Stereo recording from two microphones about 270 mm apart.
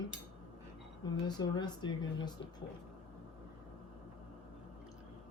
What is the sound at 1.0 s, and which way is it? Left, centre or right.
Speech, centre.